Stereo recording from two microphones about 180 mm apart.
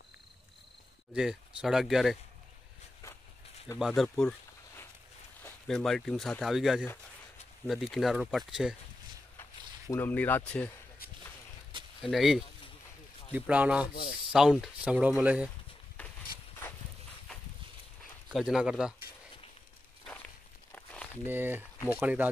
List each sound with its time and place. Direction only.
1.1 s speech: 5° right (ahead or behind)
3.8 s speech: centre (ahead or behind)
9.4 s speech: 10° left (ahead or behind)
12.0 s speech: centre (ahead or behind)
13.9 s speech: 55° left (ahead or behind)
14.3 s speech: 5° right (ahead or behind)
16.0 s a sound: 10° left (ahead or behind)
18.3 s speech: 5° right (ahead or behind)
20.7 s crumpling: 5° left (ahead or behind)
21.3 s speech: 10° right (ahead or behind)